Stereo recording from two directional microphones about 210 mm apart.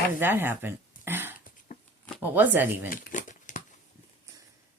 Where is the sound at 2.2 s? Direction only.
10° right (ahead or behind).